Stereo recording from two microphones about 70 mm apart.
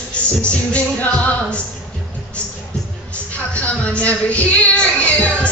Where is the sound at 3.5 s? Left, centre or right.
Centre.